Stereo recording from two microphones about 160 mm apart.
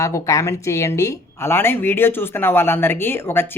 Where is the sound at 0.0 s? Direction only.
20° left (ahead or behind).